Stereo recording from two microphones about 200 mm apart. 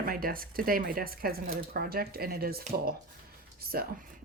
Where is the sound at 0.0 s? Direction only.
45° right (ahead or behind).